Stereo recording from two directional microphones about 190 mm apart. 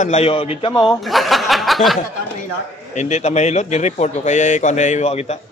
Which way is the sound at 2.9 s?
35° left (ahead or behind).